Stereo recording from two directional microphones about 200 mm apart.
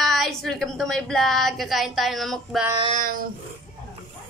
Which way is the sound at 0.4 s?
Centre (ahead or behind).